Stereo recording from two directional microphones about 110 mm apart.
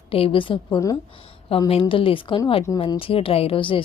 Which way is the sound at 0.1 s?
55° left (ahead or behind).